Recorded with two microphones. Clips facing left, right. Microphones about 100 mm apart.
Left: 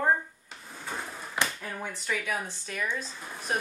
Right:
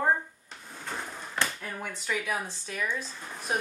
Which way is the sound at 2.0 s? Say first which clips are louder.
Right 1 dB; 10° right (ahead or behind).